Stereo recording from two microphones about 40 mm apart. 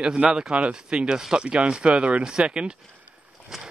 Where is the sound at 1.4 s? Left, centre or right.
Right.